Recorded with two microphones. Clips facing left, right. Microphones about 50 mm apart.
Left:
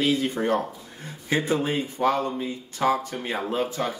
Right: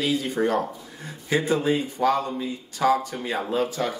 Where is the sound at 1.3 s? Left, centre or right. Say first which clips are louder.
Right 2 dB; left.